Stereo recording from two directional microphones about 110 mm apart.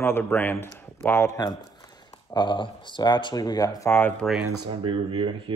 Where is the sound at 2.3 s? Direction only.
45° left (ahead or behind).